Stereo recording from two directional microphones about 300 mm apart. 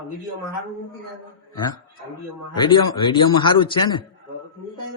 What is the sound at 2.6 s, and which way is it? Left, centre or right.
A man's voice, centre.